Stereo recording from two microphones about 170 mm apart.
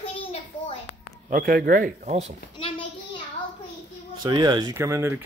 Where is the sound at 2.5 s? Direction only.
30° left (ahead or behind).